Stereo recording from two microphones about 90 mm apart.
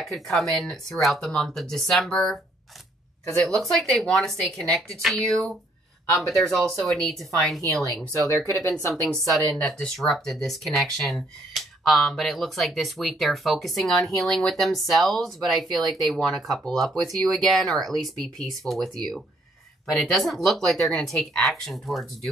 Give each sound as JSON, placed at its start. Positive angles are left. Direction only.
{"t": 0.0, "sound": "speech", "side_deg": 0}
{"t": 8.4, "sound": "speech", "side_deg": -35}
{"t": 9.1, "sound": "speech", "side_deg": 5}
{"t": 20.0, "sound": "speech", "side_deg": 0}